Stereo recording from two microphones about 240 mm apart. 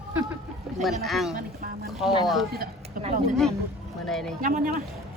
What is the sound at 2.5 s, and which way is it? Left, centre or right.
Speech, right.